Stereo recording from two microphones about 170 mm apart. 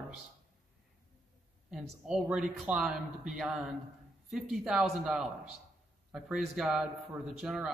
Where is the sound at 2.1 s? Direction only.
5° right (ahead or behind).